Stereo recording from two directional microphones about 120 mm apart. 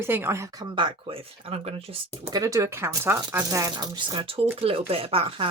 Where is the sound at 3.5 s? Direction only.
25° right (ahead or behind).